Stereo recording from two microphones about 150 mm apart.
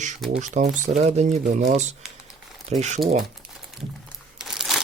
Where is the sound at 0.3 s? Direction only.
55° right (ahead or behind).